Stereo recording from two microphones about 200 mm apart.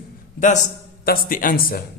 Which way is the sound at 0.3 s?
35° left (ahead or behind).